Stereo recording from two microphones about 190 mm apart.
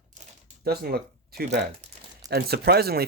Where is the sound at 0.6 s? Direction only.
55° right (ahead or behind).